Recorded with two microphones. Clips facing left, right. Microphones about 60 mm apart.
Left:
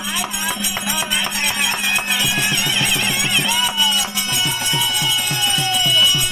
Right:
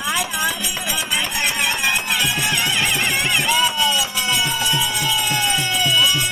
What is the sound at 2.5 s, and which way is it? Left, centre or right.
Music, right.